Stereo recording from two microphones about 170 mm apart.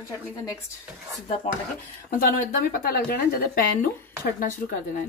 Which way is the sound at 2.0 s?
55° left (ahead or behind).